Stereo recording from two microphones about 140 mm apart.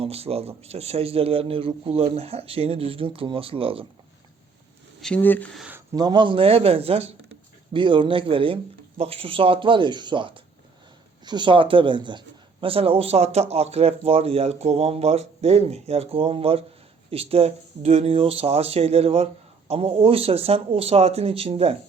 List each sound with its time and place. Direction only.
0.0 s speech: 45° right (ahead or behind)
4.9 s speech: 5° left (ahead or behind)
5.5 s a sound: 10° right (ahead or behind)
5.9 s speech: 30° right (ahead or behind); by 21.8 s 45° right (ahead or behind)